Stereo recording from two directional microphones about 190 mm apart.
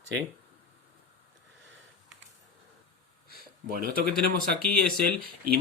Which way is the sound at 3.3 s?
50° right (ahead or behind).